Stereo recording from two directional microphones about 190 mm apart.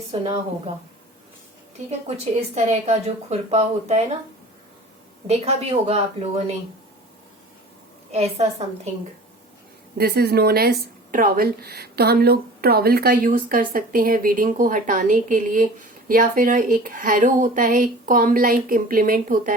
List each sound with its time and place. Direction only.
0.1 s a woman's voice: 30° right (ahead or behind)
2.6 s a woman's voice: 35° right (ahead or behind)
5.3 s a woman's voice: 35° right (ahead or behind)
8.1 s a woman's voice: 35° right (ahead or behind)
10.0 s speech: 55° right (ahead or behind)